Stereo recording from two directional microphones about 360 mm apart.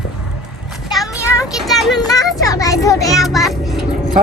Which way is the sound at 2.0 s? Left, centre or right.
Centre.